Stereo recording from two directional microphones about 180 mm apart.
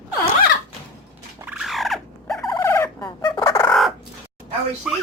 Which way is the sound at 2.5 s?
15° left (ahead or behind).